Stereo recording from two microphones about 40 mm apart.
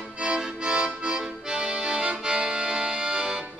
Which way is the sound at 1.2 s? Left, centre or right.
Right.